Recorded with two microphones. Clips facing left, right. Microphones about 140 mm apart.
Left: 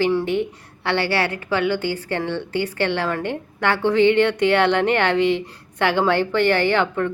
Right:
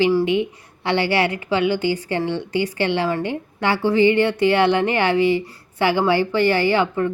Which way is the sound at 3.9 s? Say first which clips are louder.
Even; 65° left (ahead or behind).